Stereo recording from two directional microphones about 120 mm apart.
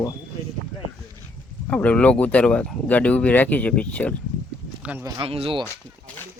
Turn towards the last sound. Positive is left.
turn(degrees=-50)  # may be behind; listen again after turning